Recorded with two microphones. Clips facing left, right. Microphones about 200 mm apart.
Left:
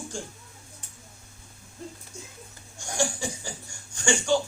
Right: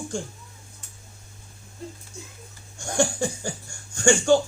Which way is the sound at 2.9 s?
55° right (ahead or behind).